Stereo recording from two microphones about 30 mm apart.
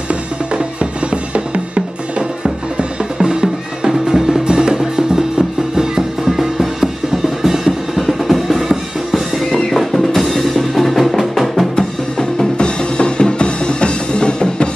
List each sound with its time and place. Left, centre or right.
1.1 s music: right
3.2 s music: right
7.4 s drum: centre
11.7 s music: centre
12.5 s music: left